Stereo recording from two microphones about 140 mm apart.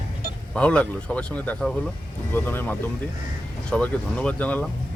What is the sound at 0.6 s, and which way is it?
Speech, 10° left (ahead or behind).